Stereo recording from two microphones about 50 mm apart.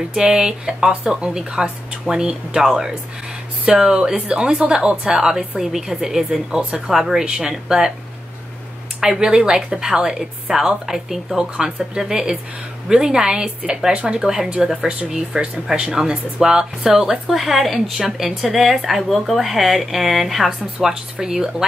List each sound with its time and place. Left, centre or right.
0.1 s a woman's voice: centre
9.2 s a woman's voice: centre